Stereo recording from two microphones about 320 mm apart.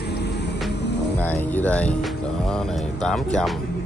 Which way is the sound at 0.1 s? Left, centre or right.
Left.